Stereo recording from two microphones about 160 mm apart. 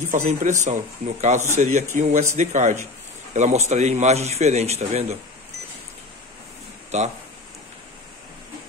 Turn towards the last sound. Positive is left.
turn(degrees=-45)  # may be behind; listen again after turning